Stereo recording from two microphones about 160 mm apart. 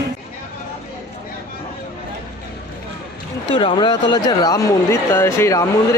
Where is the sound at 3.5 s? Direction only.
30° left (ahead or behind).